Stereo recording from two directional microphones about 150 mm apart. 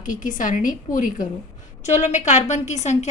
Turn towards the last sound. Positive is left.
turn(degrees=50)  # may be behind; listen again after turning